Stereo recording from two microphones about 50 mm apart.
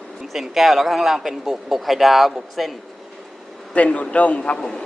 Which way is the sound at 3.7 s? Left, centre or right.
Left.